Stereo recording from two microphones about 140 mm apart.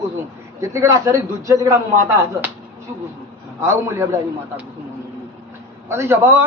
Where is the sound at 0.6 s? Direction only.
20° right (ahead or behind).